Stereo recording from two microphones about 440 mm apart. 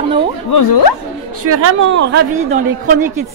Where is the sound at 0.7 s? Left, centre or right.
Left.